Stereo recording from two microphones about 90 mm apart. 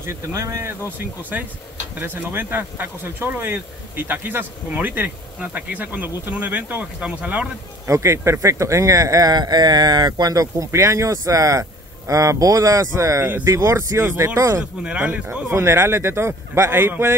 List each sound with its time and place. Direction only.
0.0 s speech: 35° right (ahead or behind)
0.8 s speech: 20° right (ahead or behind)
7.8 s speech: 35° right (ahead or behind)
14.8 s speech: 15° right (ahead or behind)
15.5 s speech: 30° right (ahead or behind)